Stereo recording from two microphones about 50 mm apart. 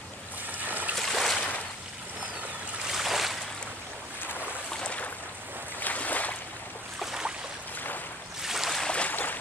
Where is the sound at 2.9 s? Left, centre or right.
Centre.